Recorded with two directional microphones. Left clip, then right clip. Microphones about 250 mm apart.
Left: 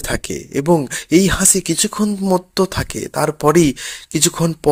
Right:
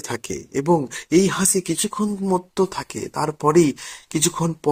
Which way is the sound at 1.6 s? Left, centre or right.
Left.